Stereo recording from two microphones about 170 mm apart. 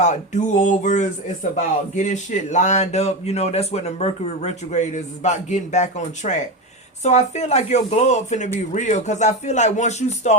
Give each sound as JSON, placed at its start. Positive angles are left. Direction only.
{"t": 0.0, "sound": "speech", "side_deg": 45}